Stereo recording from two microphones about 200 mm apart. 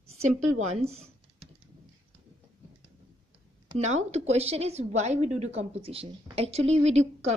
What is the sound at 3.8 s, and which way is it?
A woman's voice, 35° right (ahead or behind).